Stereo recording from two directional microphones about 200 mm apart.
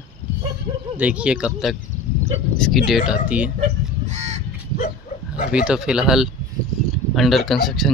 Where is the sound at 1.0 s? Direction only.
5° right (ahead or behind).